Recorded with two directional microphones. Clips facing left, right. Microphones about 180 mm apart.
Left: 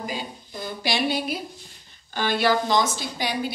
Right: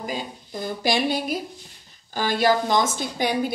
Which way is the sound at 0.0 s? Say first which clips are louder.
Right 2 dB; 45° right (ahead or behind).